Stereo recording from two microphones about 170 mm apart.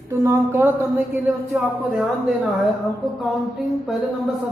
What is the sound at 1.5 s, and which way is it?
Speech, centre (ahead or behind).